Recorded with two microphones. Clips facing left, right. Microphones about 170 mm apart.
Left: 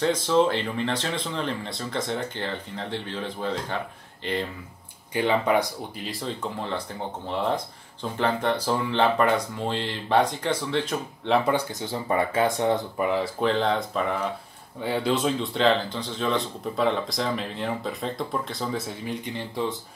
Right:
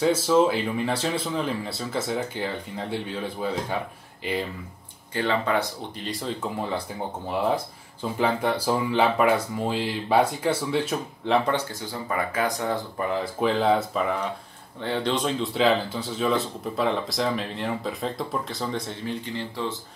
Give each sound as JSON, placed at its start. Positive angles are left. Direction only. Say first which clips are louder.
{"t": 0.0, "sound": "speech", "louder": "right 2 dB", "side_deg": -5}
{"t": 5.1, "sound": "speech", "louder": "left 2 dB", "side_deg": 15}
{"t": 6.0, "sound": "speech", "louder": "right 2 dB", "side_deg": -5}
{"t": 12.1, "sound": "speech", "louder": "left 3 dB", "side_deg": 25}
{"t": 13.0, "sound": "speech", "louder": "left 2 dB", "side_deg": 5}
{"t": 13.4, "sound": "speech", "louder": "right 5 dB", "side_deg": -5}
{"t": 14.8, "sound": "speech", "louder": "left 1 dB", "side_deg": 5}